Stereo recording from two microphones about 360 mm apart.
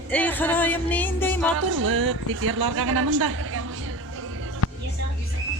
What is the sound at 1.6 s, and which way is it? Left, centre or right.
A woman's voice, right.